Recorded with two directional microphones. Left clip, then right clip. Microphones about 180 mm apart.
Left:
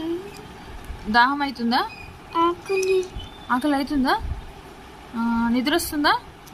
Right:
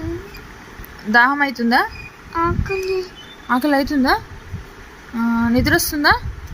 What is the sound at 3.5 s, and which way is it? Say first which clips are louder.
Speech: right 5 dB; 25° right (ahead or behind).